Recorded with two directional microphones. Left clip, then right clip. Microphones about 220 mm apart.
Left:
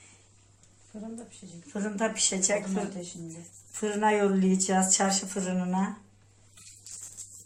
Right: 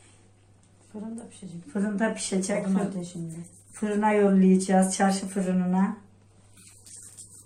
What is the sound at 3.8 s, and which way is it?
Speech, 25° left (ahead or behind).